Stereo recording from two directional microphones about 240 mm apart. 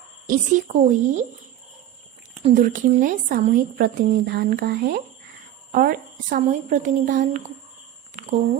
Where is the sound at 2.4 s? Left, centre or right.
Right.